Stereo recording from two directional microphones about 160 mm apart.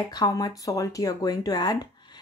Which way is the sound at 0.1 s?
25° left (ahead or behind).